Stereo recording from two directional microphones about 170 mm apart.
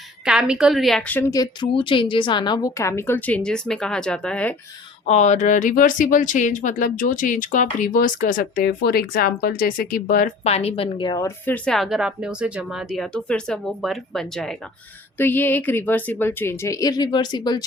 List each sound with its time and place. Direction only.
0.3 s a woman's voice: 5° right (ahead or behind)
5.0 s speech: 40° left (ahead or behind)
10.4 s a woman's voice: 40° left (ahead or behind)
11.4 s a woman's voice: 5° left (ahead or behind); by 17.7 s 25° left (ahead or behind)